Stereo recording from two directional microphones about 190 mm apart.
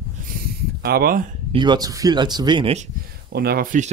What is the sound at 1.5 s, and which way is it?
Speech, 25° right (ahead or behind).